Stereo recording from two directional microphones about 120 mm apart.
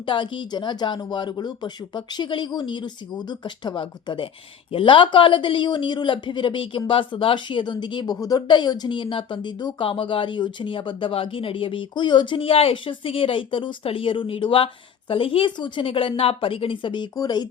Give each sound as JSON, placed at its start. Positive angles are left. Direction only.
{"t": 0.0, "sound": "speech", "side_deg": 45}